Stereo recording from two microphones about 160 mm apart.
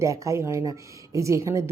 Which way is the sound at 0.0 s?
20° right (ahead or behind).